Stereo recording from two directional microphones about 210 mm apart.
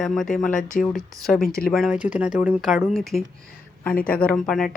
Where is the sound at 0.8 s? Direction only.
Centre (ahead or behind).